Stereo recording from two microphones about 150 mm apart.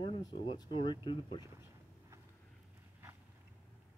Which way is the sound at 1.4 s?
20° right (ahead or behind).